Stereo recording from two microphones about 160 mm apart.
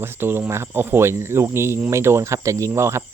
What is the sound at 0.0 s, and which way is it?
Speech, 15° right (ahead or behind).